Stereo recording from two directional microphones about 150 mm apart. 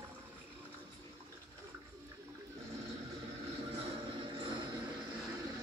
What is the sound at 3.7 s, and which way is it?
Music, 35° right (ahead or behind).